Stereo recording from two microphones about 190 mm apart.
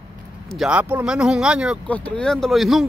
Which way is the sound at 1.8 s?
5° left (ahead or behind).